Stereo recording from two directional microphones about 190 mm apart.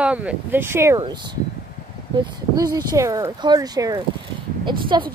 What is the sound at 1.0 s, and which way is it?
A woman's voice, 25° right (ahead or behind).